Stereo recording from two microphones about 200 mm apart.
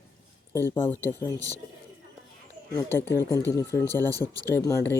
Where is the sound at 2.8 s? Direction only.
10° left (ahead or behind).